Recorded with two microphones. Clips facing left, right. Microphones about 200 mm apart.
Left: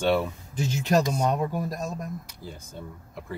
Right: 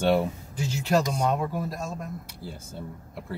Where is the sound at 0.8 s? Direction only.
20° left (ahead or behind).